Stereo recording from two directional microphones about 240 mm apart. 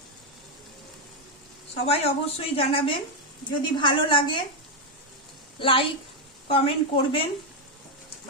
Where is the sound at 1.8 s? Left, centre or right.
Left.